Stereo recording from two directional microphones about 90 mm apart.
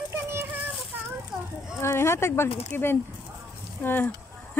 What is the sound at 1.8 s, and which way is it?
Speech, 30° left (ahead or behind).